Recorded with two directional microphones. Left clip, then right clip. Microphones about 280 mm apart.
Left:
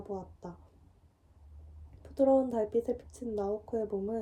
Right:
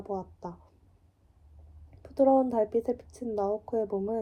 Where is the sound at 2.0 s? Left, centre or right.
Right.